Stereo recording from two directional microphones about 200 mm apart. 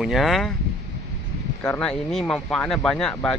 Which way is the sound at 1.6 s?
5° left (ahead or behind).